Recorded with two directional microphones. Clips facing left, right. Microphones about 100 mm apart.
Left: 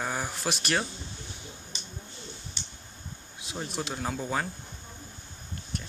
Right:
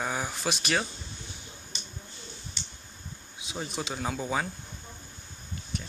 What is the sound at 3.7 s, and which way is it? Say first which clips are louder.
Speech: even; centre (ahead or behind).